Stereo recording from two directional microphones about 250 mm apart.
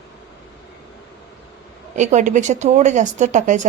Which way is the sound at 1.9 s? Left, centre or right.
Right.